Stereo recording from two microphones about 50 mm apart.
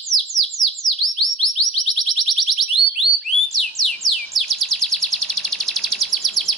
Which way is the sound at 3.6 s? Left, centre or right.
Centre.